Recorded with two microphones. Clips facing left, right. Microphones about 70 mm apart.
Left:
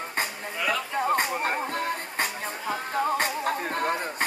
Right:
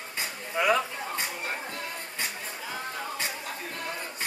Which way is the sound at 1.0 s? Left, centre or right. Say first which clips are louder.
Left 9 dB; left.